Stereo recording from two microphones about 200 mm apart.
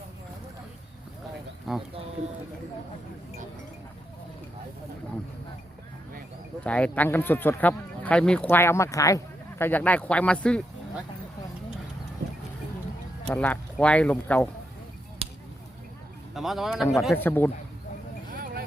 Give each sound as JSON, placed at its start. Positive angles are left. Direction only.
{"t": 1.7, "sound": "speech", "side_deg": 0}
{"t": 6.7, "sound": "speech", "side_deg": 5}
{"t": 13.2, "sound": "speech", "side_deg": 10}
{"t": 16.3, "sound": "speech", "side_deg": 0}
{"t": 17.2, "sound": "speech", "side_deg": 10}
{"t": 18.3, "sound": "vehicle", "side_deg": -45}